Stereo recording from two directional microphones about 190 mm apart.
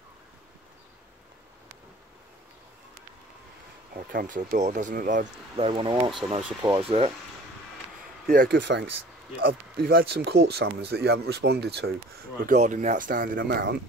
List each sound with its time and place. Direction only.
3.9 s speech: 50° right (ahead or behind); by 7.1 s 30° right (ahead or behind)
8.3 s speech: 50° right (ahead or behind)
9.8 s speech: 50° right (ahead or behind)
12.4 s speech: 40° right (ahead or behind)